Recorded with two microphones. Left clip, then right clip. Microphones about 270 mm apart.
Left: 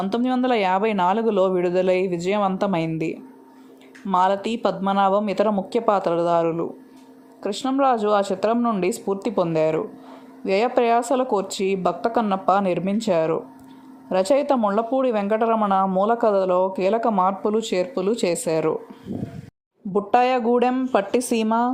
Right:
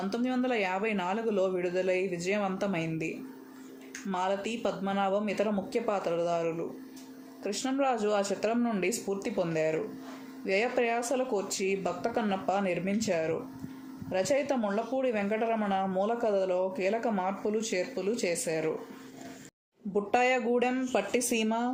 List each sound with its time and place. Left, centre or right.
0.0 s speech: left
4.1 s speech: left
19.9 s speech: left